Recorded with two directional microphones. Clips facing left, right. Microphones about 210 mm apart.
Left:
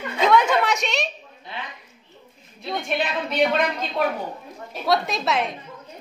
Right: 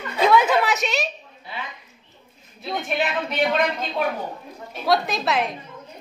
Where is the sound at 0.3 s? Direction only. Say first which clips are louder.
Even; 5° right (ahead or behind).